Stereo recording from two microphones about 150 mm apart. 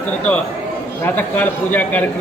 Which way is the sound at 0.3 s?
10° left (ahead or behind).